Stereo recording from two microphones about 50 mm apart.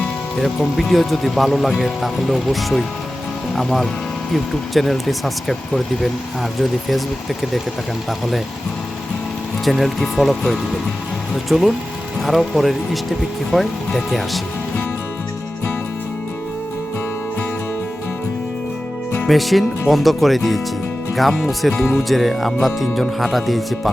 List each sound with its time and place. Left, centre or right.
0.8 s speech: centre
9.6 s speech: centre
19.3 s speech: centre